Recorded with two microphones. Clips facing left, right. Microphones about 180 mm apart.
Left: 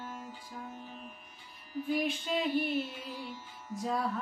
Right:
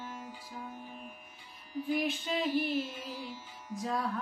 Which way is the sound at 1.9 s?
Centre (ahead or behind).